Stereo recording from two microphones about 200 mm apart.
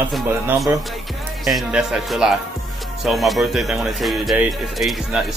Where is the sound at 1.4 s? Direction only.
Centre (ahead or behind).